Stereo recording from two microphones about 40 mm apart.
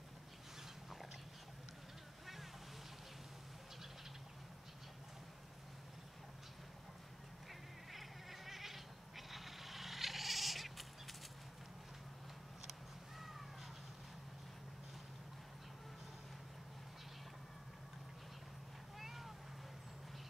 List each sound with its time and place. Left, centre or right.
7.9 s cat: centre
18.9 s cat: centre